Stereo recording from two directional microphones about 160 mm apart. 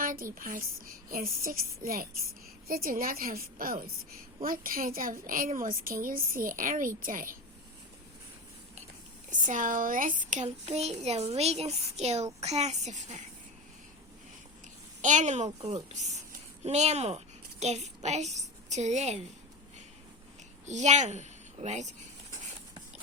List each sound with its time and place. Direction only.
0.0 s a woman's voice: 60° right (ahead or behind)
9.3 s a child's voice: 55° right (ahead or behind)
15.0 s a child's voice: 50° right (ahead or behind)
20.7 s a child's voice: 45° right (ahead or behind)